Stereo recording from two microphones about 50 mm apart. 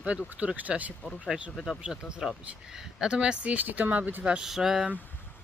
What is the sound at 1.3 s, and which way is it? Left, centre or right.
Speech, centre.